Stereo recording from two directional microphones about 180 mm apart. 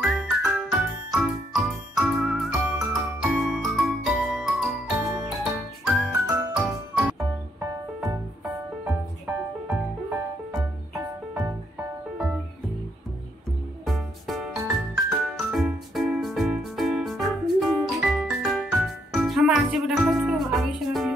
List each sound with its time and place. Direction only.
0.0 s jingle: 5° right (ahead or behind)
6.3 s music: centre (ahead or behind)
9.2 s music: 5° right (ahead or behind)
11.0 s music: 20° right (ahead or behind)
13.8 s music: centre (ahead or behind)